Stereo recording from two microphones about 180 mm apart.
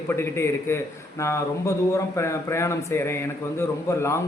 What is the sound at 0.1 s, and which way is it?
Speech, 15° left (ahead or behind).